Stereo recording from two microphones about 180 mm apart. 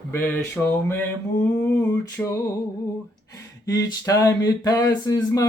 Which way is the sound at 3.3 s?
20° left (ahead or behind).